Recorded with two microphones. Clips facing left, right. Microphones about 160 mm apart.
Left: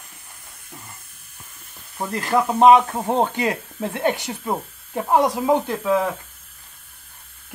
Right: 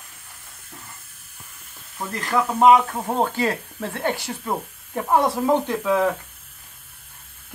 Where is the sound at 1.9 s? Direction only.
20° left (ahead or behind).